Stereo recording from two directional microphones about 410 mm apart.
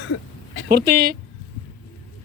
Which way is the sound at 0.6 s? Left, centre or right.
Right.